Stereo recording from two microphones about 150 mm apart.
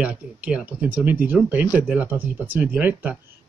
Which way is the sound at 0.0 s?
10° right (ahead or behind).